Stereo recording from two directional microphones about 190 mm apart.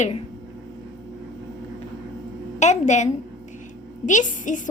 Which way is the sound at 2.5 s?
35° left (ahead or behind).